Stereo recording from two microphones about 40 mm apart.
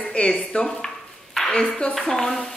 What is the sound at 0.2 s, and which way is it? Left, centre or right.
Dishes, left.